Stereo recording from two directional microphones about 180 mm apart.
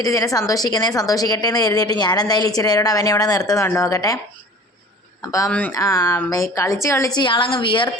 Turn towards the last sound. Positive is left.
turn(degrees=25)  # may be behind; listen again after turning